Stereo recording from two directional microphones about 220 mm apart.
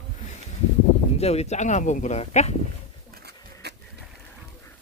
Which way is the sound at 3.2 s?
50° right (ahead or behind).